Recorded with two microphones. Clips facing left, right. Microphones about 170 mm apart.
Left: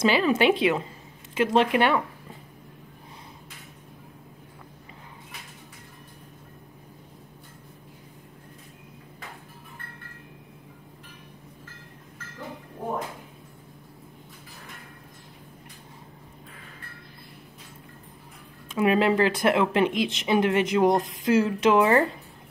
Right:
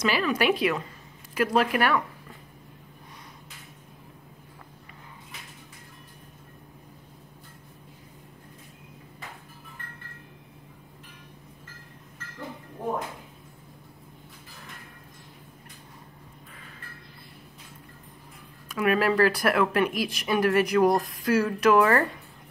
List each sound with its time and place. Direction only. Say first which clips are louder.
0.0 s speech: left 4 dB; 25° left (ahead or behind)
18.7 s speech: left 2 dB; 25° left (ahead or behind)